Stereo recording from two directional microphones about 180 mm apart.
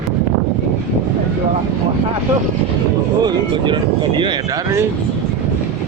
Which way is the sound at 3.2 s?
25° right (ahead or behind).